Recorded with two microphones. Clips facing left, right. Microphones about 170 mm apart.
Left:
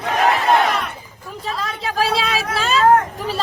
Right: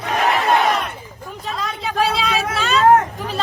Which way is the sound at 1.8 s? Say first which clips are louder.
Even; centre (ahead or behind).